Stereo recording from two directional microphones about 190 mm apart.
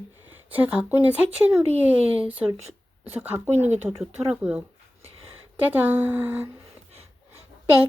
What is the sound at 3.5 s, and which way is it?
Speech, 35° right (ahead or behind).